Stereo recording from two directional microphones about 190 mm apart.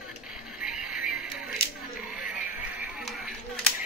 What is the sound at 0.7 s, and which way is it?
Music, 5° right (ahead or behind).